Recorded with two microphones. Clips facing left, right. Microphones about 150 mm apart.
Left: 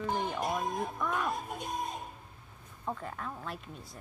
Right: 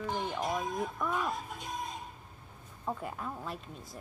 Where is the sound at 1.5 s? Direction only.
50° left (ahead or behind).